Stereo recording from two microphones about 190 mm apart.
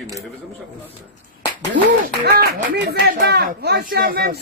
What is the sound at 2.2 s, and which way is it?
Speech, 55° right (ahead or behind).